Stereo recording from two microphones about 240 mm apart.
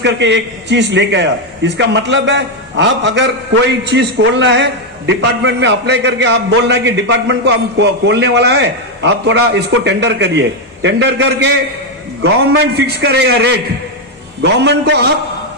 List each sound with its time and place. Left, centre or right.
0.0 s a man's voice: right
12.7 s a man's voice: right